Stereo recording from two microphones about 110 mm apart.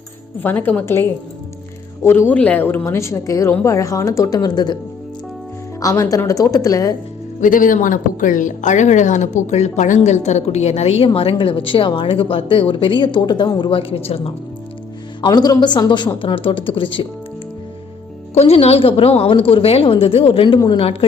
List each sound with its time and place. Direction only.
0.3 s speech: 15° left (ahead or behind)
2.0 s a woman's voice: 20° left (ahead or behind); by 4.8 s 40° left (ahead or behind)
5.8 s a woman's voice: 30° left (ahead or behind)
8.6 s a woman's voice: 90° left; by 14.3 s 60° left (ahead or behind)
15.2 s a woman's voice: 40° left (ahead or behind)
18.3 s a woman's voice: 70° left (ahead or behind)